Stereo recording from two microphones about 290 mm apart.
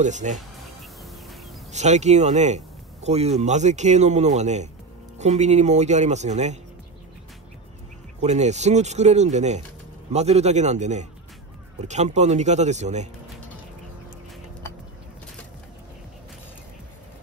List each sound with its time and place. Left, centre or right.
0.0 s speech: right
1.7 s speech: right
8.2 s speech: right